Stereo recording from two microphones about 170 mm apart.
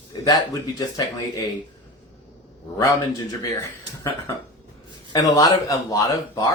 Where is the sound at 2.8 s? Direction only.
20° left (ahead or behind).